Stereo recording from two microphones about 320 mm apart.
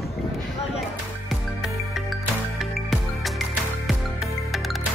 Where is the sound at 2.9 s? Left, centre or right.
Centre.